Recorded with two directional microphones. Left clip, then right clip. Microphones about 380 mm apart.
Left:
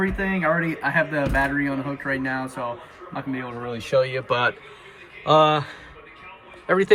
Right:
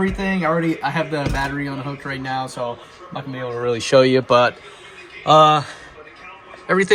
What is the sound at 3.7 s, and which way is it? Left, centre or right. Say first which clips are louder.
Speech: right 8 dB; centre.